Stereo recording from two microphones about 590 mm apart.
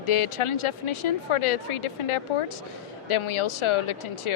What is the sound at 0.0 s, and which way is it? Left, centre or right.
Speech, left.